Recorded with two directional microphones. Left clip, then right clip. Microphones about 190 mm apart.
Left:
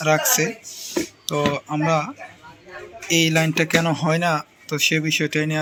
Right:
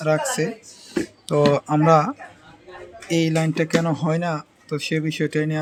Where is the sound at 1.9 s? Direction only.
45° right (ahead or behind).